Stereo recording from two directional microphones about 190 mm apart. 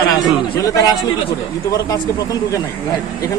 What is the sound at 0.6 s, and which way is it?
A man's voice, 15° left (ahead or behind).